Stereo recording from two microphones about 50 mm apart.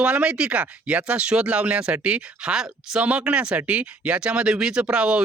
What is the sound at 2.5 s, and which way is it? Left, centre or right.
Speech, centre.